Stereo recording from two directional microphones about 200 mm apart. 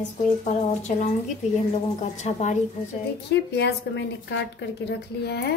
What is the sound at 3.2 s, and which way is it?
A woman's voice, 60° left (ahead or behind).